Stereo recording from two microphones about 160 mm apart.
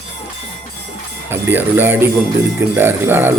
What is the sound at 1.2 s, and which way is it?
Speech, 15° right (ahead or behind).